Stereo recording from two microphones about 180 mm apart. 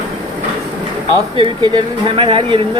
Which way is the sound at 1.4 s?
25° right (ahead or behind).